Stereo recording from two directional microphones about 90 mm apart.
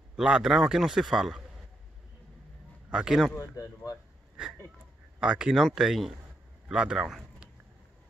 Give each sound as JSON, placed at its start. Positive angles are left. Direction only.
{"t": 0.1, "sound": "a man's voice", "side_deg": -10}
{"t": 2.9, "sound": "a man's voice", "side_deg": -5}
{"t": 3.3, "sound": "speech", "side_deg": 40}
{"t": 5.2, "sound": "a man's voice", "side_deg": -10}